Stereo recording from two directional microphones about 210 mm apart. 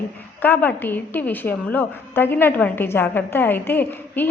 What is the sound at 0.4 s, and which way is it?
A woman's voice, 10° left (ahead or behind).